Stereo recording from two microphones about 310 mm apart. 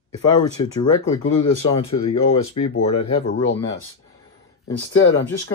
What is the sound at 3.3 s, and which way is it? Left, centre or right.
Speech, left.